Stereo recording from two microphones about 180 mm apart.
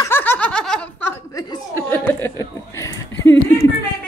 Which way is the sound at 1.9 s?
10° left (ahead or behind).